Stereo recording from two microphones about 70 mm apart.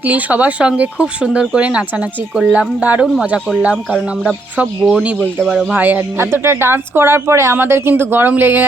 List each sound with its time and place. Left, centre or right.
0.0 s speech: right
5.4 s speech: centre
5.7 s speech: right